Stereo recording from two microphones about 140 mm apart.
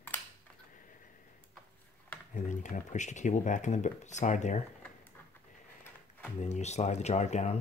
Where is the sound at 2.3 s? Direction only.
65° left (ahead or behind).